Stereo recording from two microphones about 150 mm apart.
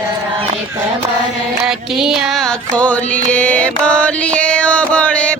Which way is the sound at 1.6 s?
5° right (ahead or behind).